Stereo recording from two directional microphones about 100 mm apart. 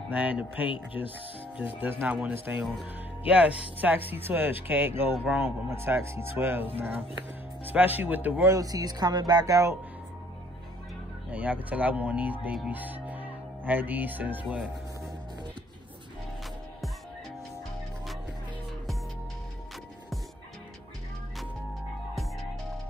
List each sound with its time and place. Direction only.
0.1 s speech: 15° right (ahead or behind)
8.5 s speech: 35° right (ahead or behind)
11.2 s speech: 15° right (ahead or behind)